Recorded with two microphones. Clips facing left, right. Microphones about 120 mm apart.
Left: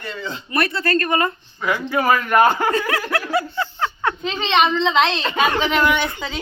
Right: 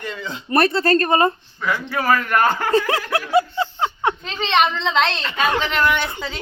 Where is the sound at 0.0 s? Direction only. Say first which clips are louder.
Even; centre (ahead or behind).